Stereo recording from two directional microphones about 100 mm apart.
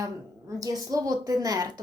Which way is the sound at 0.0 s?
35° right (ahead or behind).